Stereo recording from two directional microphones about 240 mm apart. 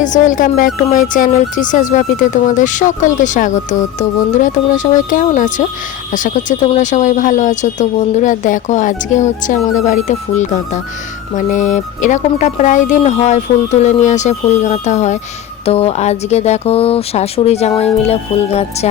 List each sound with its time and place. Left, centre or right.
0.0 s speech: left